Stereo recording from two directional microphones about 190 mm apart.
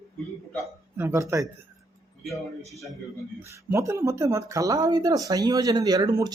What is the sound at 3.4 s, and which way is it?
A woman's voice, 15° right (ahead or behind).